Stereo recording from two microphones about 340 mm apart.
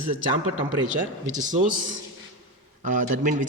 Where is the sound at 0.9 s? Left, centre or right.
Right.